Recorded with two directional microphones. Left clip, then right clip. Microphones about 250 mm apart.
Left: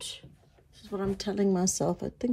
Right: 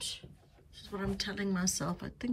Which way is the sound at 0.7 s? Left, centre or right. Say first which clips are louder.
Left 5 dB; centre.